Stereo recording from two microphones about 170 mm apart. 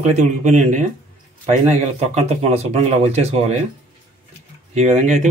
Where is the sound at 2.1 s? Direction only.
40° right (ahead or behind).